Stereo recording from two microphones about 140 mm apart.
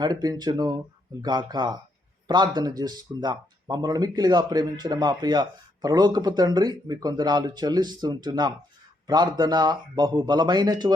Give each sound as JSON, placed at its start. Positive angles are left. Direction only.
{"t": 0.0, "sound": "speech", "side_deg": -30}